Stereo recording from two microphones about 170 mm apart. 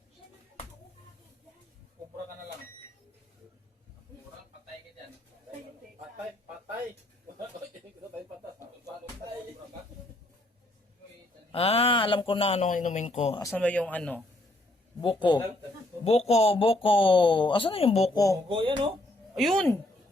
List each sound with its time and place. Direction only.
11.5 s speech: 35° left (ahead or behind)
13.6 s speech: 5° left (ahead or behind)
15.0 s speech: 30° left (ahead or behind)
18.1 s speech: 20° left (ahead or behind)
18.4 s speech: 30° right (ahead or behind)
19.3 s a woman's voice: centre (ahead or behind)